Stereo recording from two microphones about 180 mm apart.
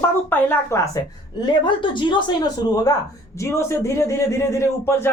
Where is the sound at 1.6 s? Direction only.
25° left (ahead or behind).